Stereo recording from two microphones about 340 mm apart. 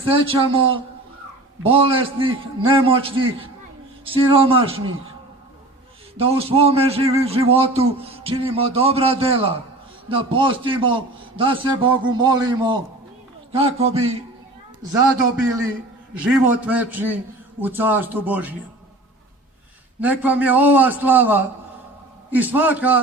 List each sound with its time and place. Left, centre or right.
0.1 s a man's voice: centre
1.6 s a man's voice: centre
6.1 s a man's voice: centre
16.1 s a man's voice: centre
20.0 s a man's voice: centre